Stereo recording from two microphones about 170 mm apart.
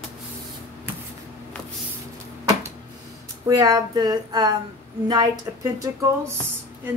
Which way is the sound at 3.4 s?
20° right (ahead or behind).